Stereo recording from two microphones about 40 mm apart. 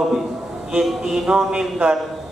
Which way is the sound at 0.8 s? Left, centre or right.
Centre.